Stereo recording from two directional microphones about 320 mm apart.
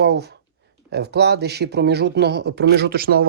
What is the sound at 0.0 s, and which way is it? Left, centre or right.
Speech, right.